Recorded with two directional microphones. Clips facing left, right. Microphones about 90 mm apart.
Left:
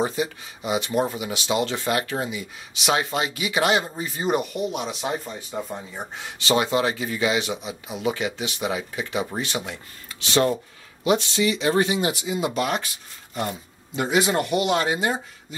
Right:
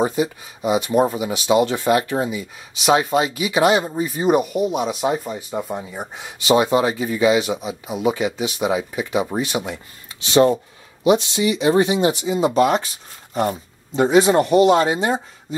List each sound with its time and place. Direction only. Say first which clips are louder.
0.0 s speech: right 5 dB; 25° right (ahead or behind)
13.3 s a sound: right 7 dB; 35° right (ahead or behind)
14.0 s speech: right 7 dB; 30° right (ahead or behind)